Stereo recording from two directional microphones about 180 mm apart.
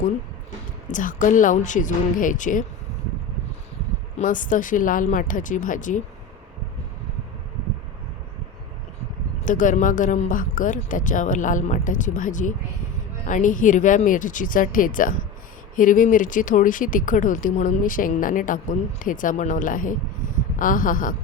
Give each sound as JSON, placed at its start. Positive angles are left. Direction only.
{"t": 0.9, "sound": "speech", "side_deg": 45}
{"t": 4.2, "sound": "speech", "side_deg": 45}
{"t": 9.4, "sound": "speech", "side_deg": 45}